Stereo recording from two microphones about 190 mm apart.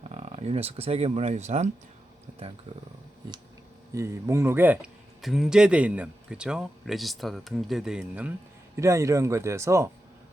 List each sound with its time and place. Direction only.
0.0 s speech: 35° right (ahead or behind)
3.9 s speech: 15° right (ahead or behind)
8.7 s speech: 15° right (ahead or behind)